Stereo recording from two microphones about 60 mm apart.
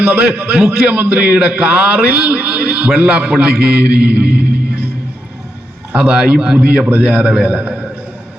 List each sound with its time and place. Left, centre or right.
0.0 s a man's voice: right
5.9 s a man's voice: right